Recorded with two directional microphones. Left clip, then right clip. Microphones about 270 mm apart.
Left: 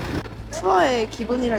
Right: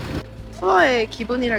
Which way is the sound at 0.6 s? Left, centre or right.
Centre.